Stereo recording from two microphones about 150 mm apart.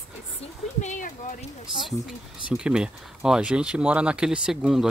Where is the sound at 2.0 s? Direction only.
5° right (ahead or behind).